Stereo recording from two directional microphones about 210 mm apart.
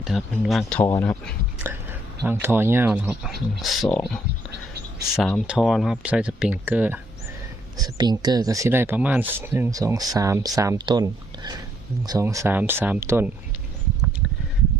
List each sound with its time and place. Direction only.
0.0 s speech: centre (ahead or behind)
1.5 s whispering: 10° right (ahead or behind)
2.2 s speech: 10° right (ahead or behind)
7.8 s speech: 20° right (ahead or behind)